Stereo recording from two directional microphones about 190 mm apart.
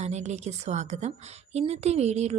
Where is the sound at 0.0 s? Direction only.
35° right (ahead or behind).